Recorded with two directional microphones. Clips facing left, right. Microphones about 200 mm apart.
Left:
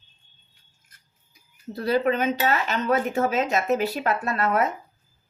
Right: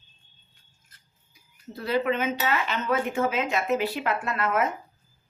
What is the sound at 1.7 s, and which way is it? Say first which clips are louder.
Speech: left 3 dB; 40° left (ahead or behind).